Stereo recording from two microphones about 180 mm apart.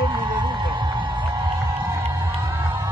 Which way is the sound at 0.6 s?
25° right (ahead or behind).